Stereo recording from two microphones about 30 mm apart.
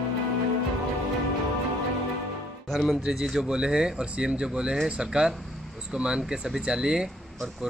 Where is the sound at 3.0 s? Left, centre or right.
Centre.